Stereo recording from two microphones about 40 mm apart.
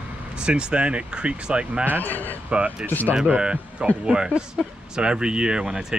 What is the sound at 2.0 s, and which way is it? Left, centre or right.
Speech, left.